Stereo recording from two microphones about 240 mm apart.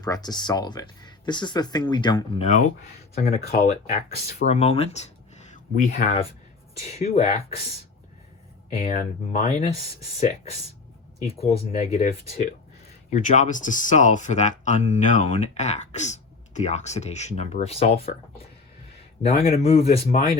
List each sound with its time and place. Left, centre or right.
0.0 s speech: centre
3.2 s speech: left
3.5 s speech: left
4.1 s speech: left
4.4 s speech: left
8.7 s speech: left
11.5 s speech: left
13.1 s speech: left
19.5 s speech: left